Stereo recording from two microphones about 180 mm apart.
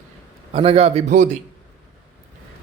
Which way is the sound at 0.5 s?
30° right (ahead or behind).